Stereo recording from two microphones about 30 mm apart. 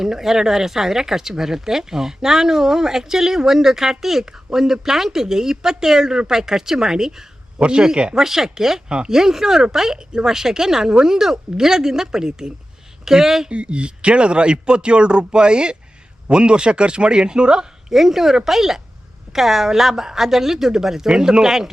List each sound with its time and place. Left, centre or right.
0.0 s speech: centre
8.1 s speech: centre
10.1 s a woman's voice: right
13.5 s speech: right
17.9 s speech: centre
21.1 s a woman's voice: right